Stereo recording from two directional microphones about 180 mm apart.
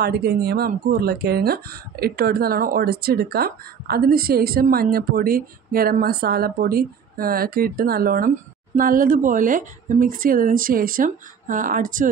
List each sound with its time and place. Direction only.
0.0 s a woman's voice: 60° right (ahead or behind)